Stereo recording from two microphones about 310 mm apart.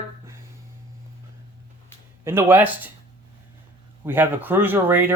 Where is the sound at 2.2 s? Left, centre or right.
Centre.